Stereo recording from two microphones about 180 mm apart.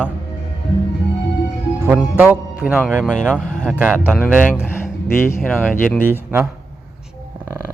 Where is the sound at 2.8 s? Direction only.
5° left (ahead or behind).